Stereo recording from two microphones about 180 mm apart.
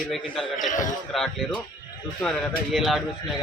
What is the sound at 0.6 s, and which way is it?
Speech, 45° left (ahead or behind).